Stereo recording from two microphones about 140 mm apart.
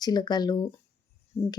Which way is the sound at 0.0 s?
30° left (ahead or behind).